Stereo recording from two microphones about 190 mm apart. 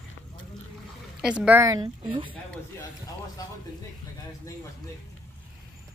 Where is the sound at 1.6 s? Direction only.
20° right (ahead or behind).